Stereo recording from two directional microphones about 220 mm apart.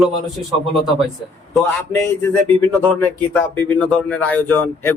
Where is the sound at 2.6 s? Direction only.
5° left (ahead or behind).